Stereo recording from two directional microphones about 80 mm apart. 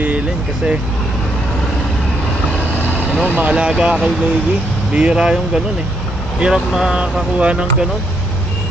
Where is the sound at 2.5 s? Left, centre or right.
Left.